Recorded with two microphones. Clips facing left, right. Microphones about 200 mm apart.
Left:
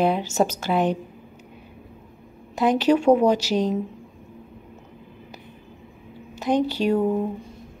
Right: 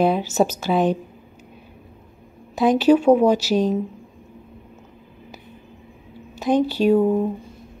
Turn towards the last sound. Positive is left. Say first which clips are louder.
# right 4 dB
turn(degrees=-5)  # may be behind; listen again after turning